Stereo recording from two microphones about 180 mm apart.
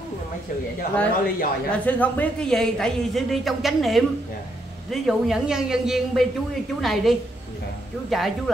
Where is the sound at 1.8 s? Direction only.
10° left (ahead or behind).